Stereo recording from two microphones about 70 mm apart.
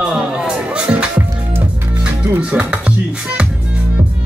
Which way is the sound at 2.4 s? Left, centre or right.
Centre.